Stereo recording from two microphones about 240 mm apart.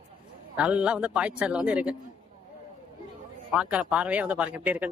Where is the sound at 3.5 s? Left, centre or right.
Centre.